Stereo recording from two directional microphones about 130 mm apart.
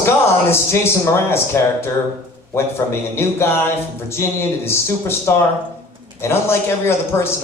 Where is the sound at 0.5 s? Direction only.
20° left (ahead or behind).